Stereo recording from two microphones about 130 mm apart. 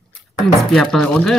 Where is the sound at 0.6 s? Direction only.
5° left (ahead or behind).